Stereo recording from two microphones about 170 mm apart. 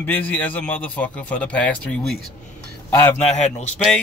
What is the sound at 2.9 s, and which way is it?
Speech, 15° left (ahead or behind).